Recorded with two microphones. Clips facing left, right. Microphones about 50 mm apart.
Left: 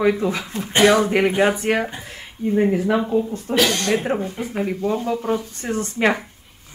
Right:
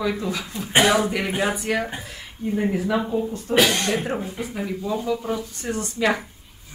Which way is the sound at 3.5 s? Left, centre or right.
Centre.